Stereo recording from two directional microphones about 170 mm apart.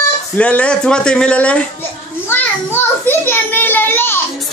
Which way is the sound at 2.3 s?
10° left (ahead or behind).